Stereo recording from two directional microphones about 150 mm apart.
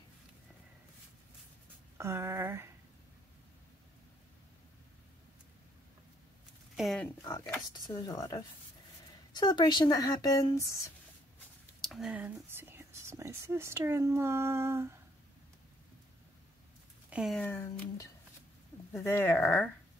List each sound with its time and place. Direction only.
2.0 s speech: 20° right (ahead or behind)
6.8 s speech: centre (ahead or behind)
7.2 s speech: 20° left (ahead or behind)
11.8 s speech: centre (ahead or behind); by 15.0 s 15° right (ahead or behind)
17.1 s speech: 5° right (ahead or behind)
17.4 s speech: 15° left (ahead or behind)
18.9 s speech: 15° left (ahead or behind)